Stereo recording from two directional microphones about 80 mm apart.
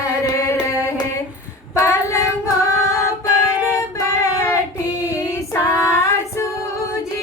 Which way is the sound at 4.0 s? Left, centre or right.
Left.